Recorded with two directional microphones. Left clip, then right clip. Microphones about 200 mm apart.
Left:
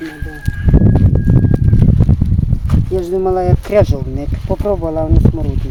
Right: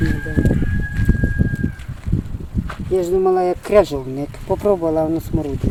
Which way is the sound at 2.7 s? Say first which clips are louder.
Even; 45° left (ahead or behind).